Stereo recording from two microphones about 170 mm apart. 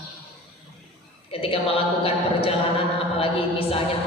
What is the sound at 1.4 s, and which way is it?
A woman's voice, 35° left (ahead or behind).